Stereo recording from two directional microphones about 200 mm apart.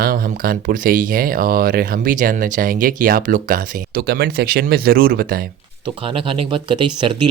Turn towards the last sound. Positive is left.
turn(degrees=-25)  # may be behind; listen again after turning